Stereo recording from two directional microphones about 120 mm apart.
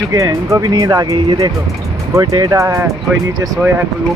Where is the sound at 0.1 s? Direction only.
30° right (ahead or behind).